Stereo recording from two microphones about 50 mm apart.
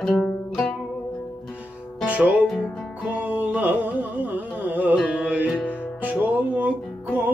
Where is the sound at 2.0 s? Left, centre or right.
Right.